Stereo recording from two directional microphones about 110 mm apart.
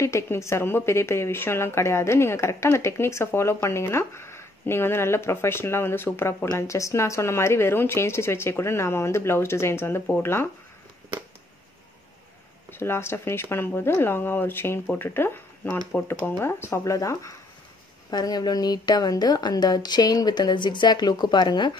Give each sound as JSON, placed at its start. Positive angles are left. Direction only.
{"t": 0.0, "sound": "a woman's voice", "side_deg": 25}
{"t": 12.7, "sound": "a woman's voice", "side_deg": 20}